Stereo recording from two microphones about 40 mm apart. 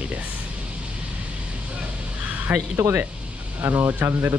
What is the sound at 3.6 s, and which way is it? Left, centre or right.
Speech, right.